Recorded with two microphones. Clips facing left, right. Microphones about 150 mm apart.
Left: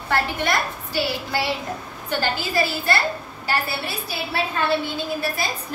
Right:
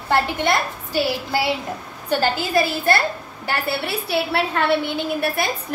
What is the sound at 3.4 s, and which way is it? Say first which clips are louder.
A woman's voice: right 2 dB; 65° right (ahead or behind).